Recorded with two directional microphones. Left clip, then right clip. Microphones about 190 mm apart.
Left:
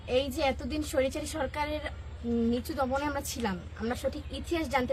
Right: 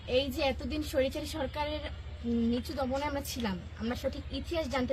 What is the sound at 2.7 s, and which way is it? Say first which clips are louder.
A woman's voice: left 4 dB; 15° left (ahead or behind).